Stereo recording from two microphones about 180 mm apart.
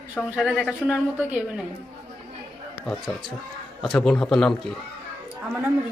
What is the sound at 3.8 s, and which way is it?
Speech, 5° left (ahead or behind).